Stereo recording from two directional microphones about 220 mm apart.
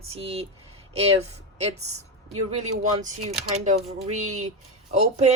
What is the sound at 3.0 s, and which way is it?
Speech, 35° right (ahead or behind).